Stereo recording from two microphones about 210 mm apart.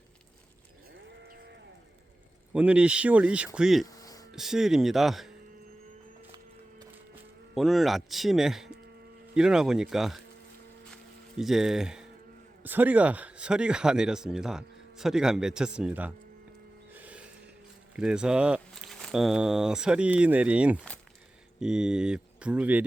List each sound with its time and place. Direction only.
2.5 s speech: 5° right (ahead or behind)
3.8 s a sound: 15° left (ahead or behind)
4.3 s speech: centre (ahead or behind)
7.5 s speech: centre (ahead or behind)
10.9 s a sound: centre (ahead or behind)
12.6 s speech: 10° right (ahead or behind)
16.9 s music: 5° right (ahead or behind)
17.9 s speech: 5° right (ahead or behind)